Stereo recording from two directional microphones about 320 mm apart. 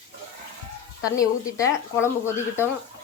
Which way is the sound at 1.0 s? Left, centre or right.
Centre.